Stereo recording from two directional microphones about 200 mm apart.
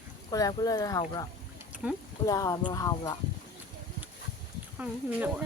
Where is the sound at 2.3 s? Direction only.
15° left (ahead or behind).